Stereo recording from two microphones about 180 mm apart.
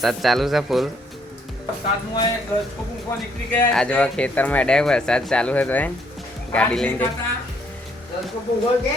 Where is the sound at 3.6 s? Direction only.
5° left (ahead or behind).